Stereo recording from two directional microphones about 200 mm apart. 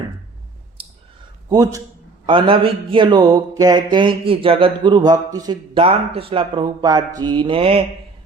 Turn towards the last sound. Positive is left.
turn(degrees=-25)  # may be behind; listen again after turning